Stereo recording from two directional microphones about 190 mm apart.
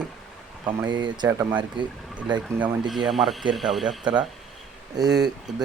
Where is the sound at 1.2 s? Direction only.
15° right (ahead or behind).